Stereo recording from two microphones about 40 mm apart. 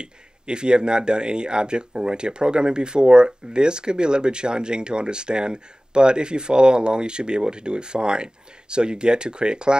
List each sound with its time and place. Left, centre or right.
0.0 s speech: right